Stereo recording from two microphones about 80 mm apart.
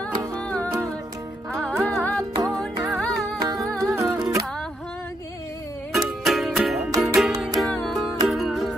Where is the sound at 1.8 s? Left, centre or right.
Centre.